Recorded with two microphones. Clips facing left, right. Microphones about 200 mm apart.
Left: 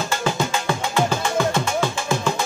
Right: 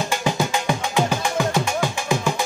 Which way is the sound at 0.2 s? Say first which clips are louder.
Right 1 dB; 15° right (ahead or behind).